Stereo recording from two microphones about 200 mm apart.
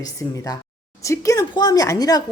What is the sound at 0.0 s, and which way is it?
Speech, 15° left (ahead or behind).